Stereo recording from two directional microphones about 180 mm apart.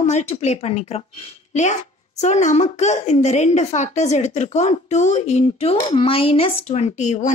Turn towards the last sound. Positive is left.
turn(degrees=40)  # may be behind; listen again after turning